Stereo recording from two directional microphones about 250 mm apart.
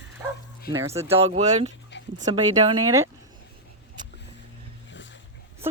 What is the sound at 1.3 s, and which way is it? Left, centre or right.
Speech, right.